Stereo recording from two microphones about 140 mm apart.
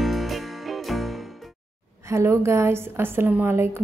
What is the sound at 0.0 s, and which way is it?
Music, centre (ahead or behind).